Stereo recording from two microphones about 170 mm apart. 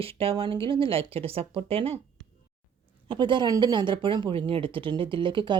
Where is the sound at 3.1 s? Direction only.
25° right (ahead or behind).